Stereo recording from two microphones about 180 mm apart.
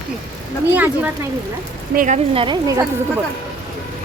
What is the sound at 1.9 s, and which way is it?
Speech, 40° right (ahead or behind).